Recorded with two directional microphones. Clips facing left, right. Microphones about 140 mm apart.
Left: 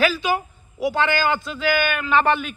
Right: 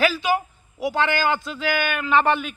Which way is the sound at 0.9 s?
25° right (ahead or behind).